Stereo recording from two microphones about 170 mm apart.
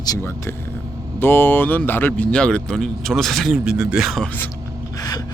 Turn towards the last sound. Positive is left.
turn(degrees=20)  # may be behind; listen again after turning